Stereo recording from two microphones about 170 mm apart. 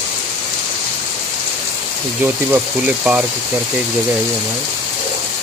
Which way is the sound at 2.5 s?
5° right (ahead or behind).